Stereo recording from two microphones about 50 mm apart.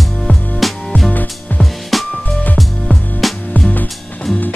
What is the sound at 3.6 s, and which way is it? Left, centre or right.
Music, left.